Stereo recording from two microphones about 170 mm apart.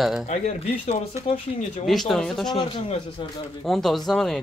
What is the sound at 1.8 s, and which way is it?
Speech, centre (ahead or behind).